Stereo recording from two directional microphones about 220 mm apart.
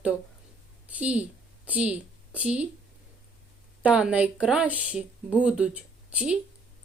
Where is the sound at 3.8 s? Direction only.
5° right (ahead or behind).